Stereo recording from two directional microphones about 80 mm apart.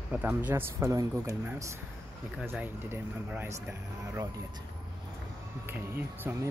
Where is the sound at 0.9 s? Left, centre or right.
Right.